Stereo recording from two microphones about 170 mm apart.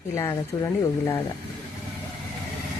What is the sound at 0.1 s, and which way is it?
Speech, 20° left (ahead or behind).